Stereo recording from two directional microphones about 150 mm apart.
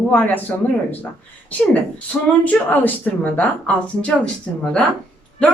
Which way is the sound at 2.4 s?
10° left (ahead or behind).